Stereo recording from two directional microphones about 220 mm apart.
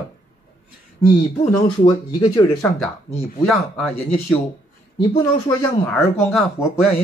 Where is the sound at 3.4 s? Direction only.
Centre (ahead or behind).